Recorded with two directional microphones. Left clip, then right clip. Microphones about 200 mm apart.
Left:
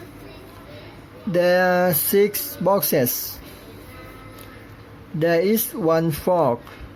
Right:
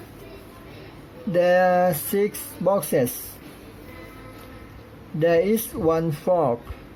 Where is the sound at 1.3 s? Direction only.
10° left (ahead or behind).